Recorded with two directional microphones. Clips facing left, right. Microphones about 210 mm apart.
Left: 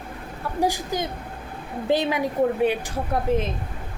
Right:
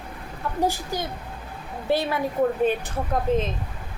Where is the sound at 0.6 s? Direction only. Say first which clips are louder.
Left 2 dB; 15° left (ahead or behind).